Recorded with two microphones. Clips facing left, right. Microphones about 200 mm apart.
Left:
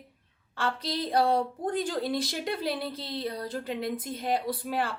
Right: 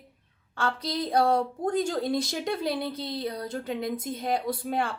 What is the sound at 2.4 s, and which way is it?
A woman's voice, centre (ahead or behind).